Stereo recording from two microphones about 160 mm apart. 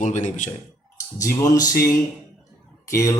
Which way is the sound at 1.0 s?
20° left (ahead or behind).